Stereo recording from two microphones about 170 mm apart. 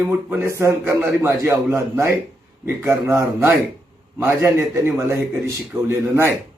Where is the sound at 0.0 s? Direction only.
10° right (ahead or behind).